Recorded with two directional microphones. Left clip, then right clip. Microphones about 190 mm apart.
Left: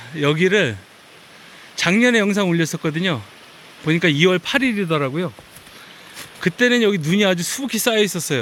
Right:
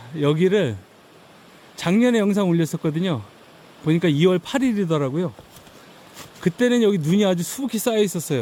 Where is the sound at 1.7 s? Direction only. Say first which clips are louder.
Left 4 dB; 10° right (ahead or behind).